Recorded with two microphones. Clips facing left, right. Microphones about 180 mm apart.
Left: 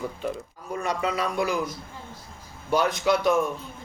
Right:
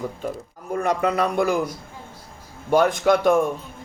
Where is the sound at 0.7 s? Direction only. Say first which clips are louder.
Right 6 dB; 55° right (ahead or behind).